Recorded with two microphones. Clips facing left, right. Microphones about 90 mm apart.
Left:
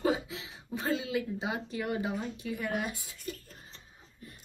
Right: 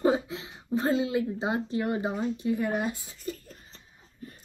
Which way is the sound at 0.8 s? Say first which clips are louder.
Right 6 dB; 30° right (ahead or behind).